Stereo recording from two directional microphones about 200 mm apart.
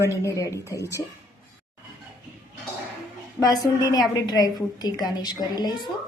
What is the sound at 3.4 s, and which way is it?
A woman's voice, 20° left (ahead or behind).